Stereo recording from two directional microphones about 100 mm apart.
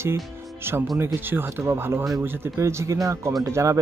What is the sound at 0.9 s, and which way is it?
Speech, 25° right (ahead or behind).